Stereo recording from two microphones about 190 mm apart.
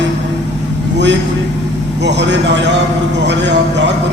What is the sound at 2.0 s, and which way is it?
A man's voice, 65° right (ahead or behind).